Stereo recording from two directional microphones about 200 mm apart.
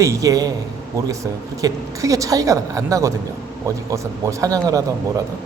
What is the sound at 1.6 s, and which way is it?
A woman's voice, 15° right (ahead or behind).